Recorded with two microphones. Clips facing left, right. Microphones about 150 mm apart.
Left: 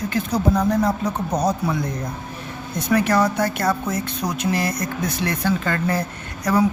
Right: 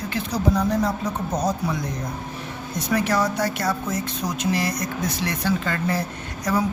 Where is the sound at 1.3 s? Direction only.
60° left (ahead or behind).